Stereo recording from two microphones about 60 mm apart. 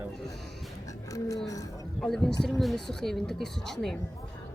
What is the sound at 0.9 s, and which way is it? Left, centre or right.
Music, left.